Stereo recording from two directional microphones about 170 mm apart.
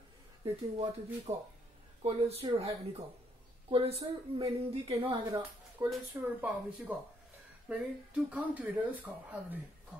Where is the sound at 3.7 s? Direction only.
35° right (ahead or behind).